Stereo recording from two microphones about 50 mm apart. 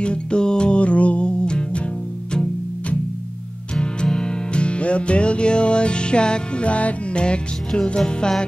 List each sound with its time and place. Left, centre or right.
0.0 s music: centre
3.8 s music: centre